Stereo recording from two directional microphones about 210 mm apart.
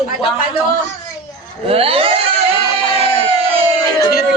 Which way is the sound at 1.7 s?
25° right (ahead or behind).